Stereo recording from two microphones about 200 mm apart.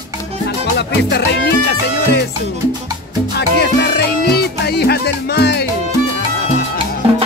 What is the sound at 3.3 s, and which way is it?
Music, 55° left (ahead or behind).